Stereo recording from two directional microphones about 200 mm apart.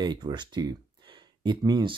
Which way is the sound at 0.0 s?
20° right (ahead or behind).